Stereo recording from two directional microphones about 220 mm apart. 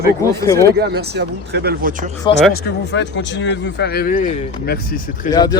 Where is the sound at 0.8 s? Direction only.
45° right (ahead or behind).